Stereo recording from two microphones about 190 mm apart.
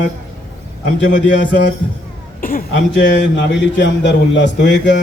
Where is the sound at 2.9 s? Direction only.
70° left (ahead or behind).